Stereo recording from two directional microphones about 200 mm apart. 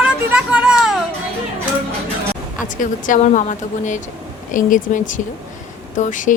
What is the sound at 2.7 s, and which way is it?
Speech, 40° left (ahead or behind).